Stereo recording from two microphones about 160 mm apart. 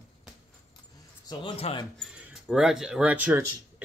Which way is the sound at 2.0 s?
5° right (ahead or behind).